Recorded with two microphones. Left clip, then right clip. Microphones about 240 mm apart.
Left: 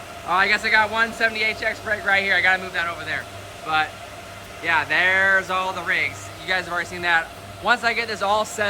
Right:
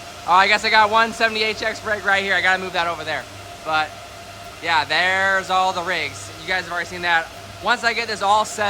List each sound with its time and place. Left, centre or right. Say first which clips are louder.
0.3 s a man's voice: right 4 dB; centre